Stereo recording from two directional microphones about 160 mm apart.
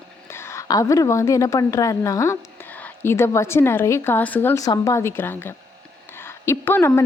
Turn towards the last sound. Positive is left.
turn(degrees=15)  # may be behind; listen again after turning